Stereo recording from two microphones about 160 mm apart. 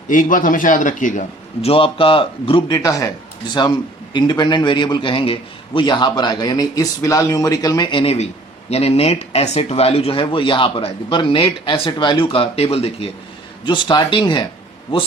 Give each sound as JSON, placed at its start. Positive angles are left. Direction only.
{"t": 0.1, "sound": "speech", "side_deg": 55}
{"t": 1.6, "sound": "a man's voice", "side_deg": 35}